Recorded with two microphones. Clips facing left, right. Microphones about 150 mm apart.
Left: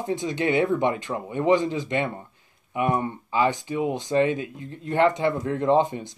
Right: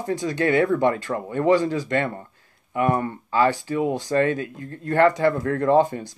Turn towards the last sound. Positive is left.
turn(degrees=20)  # may be behind; listen again after turning